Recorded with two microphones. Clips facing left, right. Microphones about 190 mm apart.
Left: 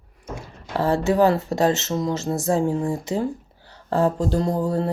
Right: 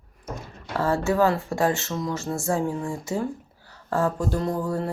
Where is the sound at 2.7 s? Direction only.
40° left (ahead or behind).